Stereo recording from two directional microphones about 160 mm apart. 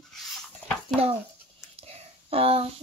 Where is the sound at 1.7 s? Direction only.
35° right (ahead or behind).